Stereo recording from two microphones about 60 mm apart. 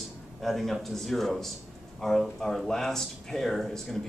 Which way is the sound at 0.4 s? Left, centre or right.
Centre.